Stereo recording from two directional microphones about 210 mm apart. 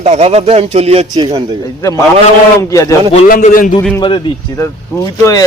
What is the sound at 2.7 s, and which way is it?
Speech, 15° left (ahead or behind).